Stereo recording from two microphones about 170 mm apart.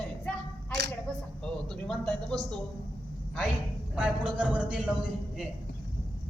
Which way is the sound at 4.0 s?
5° right (ahead or behind).